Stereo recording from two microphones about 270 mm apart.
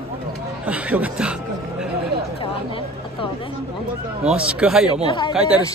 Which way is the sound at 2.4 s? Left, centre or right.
Centre.